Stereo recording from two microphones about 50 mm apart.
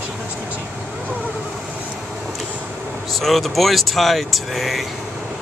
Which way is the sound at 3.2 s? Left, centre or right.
Centre.